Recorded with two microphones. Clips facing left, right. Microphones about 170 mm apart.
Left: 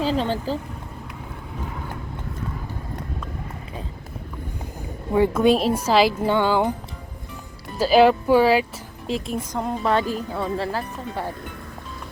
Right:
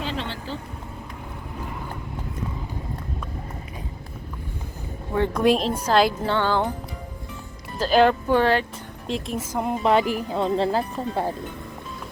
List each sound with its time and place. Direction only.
0.0 s speech: 40° left (ahead or behind)
5.1 s a woman's voice: 5° left (ahead or behind)
7.8 s a woman's voice: 5° left (ahead or behind); by 11.3 s 25° right (ahead or behind)